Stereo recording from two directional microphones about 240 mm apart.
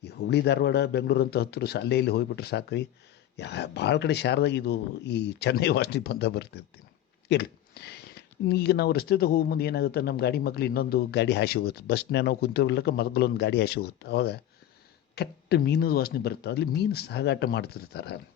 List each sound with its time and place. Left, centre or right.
0.0 s speech: left